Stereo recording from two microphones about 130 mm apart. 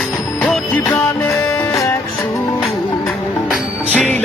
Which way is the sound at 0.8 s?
15° left (ahead or behind).